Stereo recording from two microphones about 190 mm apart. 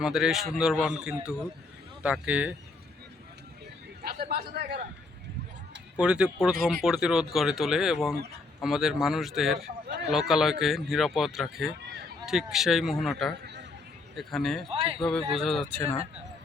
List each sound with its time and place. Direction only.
0.0 s speech: centre (ahead or behind)
4.0 s a man's voice: 55° right (ahead or behind)
6.0 s speech: 5° right (ahead or behind)
13.4 s a sound: 60° right (ahead or behind)
14.2 s speech: centre (ahead or behind)
14.7 s speech: 30° right (ahead or behind)
15.4 s speech: centre (ahead or behind)
15.7 s speech: 15° left (ahead or behind)